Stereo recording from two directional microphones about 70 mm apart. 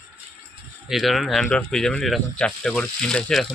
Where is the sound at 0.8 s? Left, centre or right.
Centre.